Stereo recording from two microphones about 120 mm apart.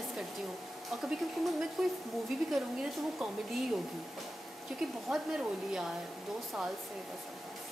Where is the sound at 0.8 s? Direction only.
Centre (ahead or behind).